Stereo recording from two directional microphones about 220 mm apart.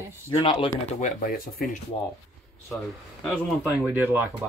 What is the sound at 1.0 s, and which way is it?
Speech, 40° left (ahead or behind).